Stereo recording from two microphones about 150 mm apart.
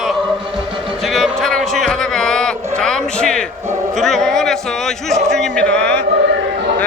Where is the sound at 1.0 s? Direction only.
Centre (ahead or behind).